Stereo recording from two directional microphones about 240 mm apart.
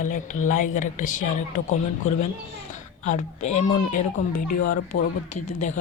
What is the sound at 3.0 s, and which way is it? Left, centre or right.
Speech, left.